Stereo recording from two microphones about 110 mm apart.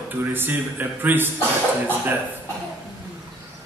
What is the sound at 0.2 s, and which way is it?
A man's voice, 20° right (ahead or behind).